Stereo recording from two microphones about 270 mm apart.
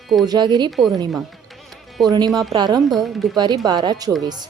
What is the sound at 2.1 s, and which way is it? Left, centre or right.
Speech, centre.